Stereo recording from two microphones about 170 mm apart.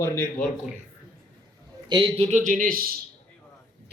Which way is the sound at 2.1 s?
40° right (ahead or behind).